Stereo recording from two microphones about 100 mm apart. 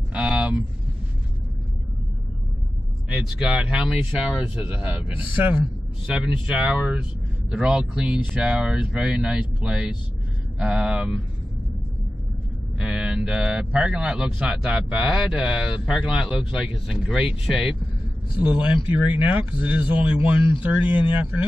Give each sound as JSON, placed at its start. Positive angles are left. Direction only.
{"t": 0.1, "sound": "a sound", "side_deg": -10}
{"t": 3.1, "sound": "a man's voice", "side_deg": -10}
{"t": 6.1, "sound": "a man's voice", "side_deg": -10}
{"t": 12.7, "sound": "mantra", "side_deg": -10}
{"t": 13.7, "sound": "a man's voice", "side_deg": -10}